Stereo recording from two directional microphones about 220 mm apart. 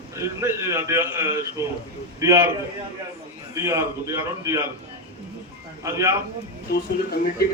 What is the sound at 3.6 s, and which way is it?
A man's voice, 15° right (ahead or behind).